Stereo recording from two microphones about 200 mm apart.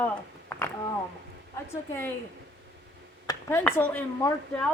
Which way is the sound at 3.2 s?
10° left (ahead or behind).